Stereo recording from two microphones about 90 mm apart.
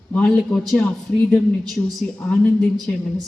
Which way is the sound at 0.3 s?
5° left (ahead or behind).